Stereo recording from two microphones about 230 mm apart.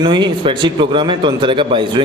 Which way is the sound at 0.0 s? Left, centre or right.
Centre.